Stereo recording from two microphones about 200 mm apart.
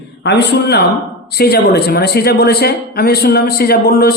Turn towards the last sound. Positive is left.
turn(degrees=50)  # may be behind; listen again after turning